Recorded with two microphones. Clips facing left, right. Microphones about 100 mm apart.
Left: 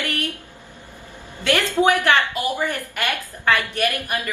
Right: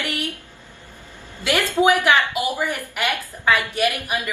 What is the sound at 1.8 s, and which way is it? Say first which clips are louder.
A woman's voice: right 1 dB; 10° right (ahead or behind).